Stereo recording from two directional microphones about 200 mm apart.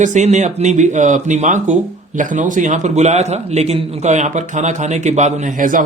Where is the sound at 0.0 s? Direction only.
35° right (ahead or behind).